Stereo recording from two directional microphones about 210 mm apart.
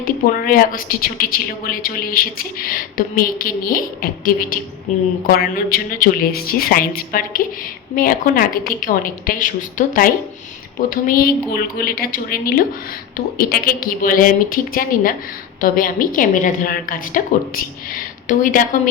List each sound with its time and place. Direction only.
0.0 s a woman's voice: 45° left (ahead or behind)
4.9 s a woman's voice: 35° left (ahead or behind)
5.3 s a woman's voice: 45° left (ahead or behind)